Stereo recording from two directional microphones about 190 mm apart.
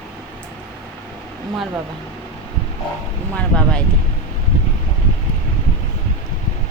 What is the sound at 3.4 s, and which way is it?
Speech, 5° left (ahead or behind).